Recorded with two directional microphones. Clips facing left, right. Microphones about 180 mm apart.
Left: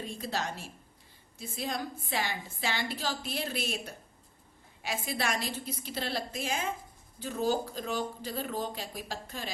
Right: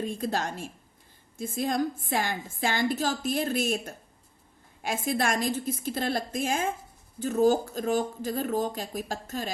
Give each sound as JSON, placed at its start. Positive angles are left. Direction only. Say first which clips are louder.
{"t": 0.0, "sound": "a woman's voice", "louder": "right 6 dB", "side_deg": -50}